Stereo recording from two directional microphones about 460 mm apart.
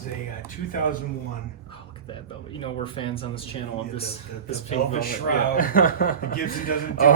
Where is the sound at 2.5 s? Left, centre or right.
Centre.